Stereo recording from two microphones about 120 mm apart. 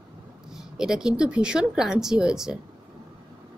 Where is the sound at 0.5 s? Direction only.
5° right (ahead or behind).